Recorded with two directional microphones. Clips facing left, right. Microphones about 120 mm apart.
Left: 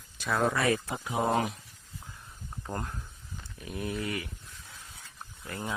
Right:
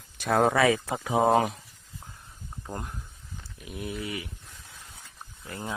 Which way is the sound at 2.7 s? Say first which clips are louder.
Left 1 dB; 15° right (ahead or behind).